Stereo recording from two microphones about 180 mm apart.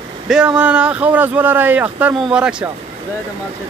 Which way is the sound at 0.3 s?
5° right (ahead or behind).